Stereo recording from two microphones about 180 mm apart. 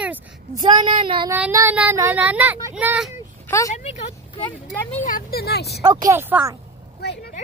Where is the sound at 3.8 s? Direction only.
35° left (ahead or behind).